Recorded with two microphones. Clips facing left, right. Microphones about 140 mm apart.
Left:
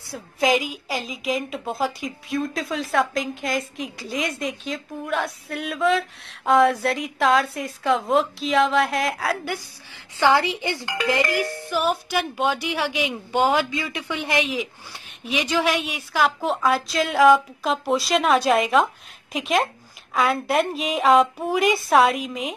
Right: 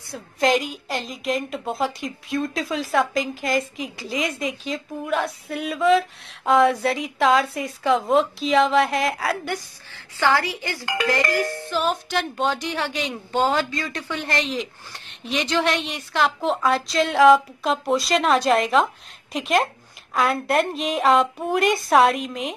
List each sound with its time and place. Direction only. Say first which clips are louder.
0.1 s a woman's voice: right 1 dB; centre (ahead or behind)
9.9 s a woman's voice: left 2 dB; 20° left (ahead or behind); by 22.5 s centre (ahead or behind)